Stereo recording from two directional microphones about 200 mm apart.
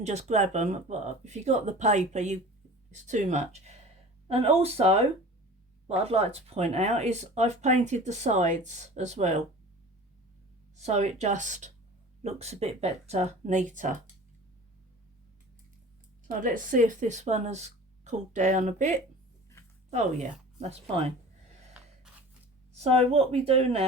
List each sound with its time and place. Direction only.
0.0 s speech: 35° right (ahead or behind)
10.8 s speech: 35° right (ahead or behind)
16.2 s speech: 40° right (ahead or behind)
21.7 s gasp: 5° right (ahead or behind)
22.7 s speech: 30° right (ahead or behind)